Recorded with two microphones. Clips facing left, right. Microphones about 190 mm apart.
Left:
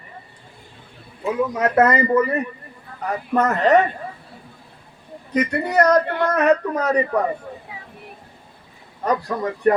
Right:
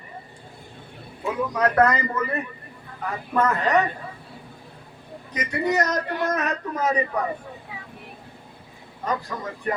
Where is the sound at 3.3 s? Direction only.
45° left (ahead or behind).